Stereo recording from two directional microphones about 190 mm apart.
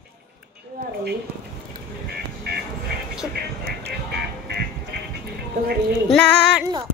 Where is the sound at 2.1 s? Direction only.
60° right (ahead or behind).